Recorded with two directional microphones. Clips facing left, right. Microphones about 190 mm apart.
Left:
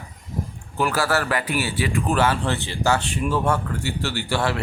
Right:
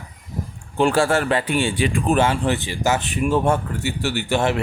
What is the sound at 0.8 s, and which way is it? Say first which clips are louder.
Speech: right 5 dB; 25° right (ahead or behind).